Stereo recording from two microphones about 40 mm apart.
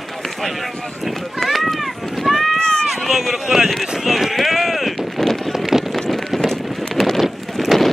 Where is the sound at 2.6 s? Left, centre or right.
Left.